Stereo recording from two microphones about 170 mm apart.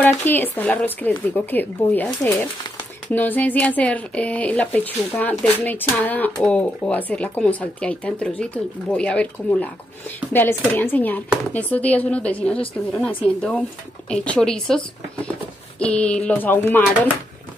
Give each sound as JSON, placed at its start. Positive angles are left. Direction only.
{"t": 0.0, "sound": "speech", "side_deg": 10}
{"t": 15.8, "sound": "speech", "side_deg": 5}